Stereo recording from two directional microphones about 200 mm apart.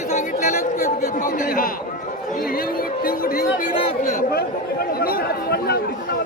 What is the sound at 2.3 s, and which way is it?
Speech, 45° left (ahead or behind).